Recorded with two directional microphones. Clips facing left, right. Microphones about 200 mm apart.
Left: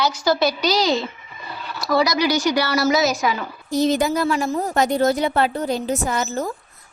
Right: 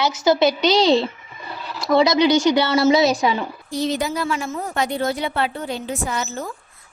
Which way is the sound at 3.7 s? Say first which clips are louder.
Left 5 dB; 45° left (ahead or behind).